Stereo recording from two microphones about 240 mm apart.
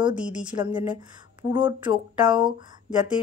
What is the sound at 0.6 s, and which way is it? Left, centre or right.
Speech, centre.